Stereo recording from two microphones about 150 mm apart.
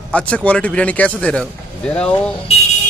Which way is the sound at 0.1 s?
10° left (ahead or behind).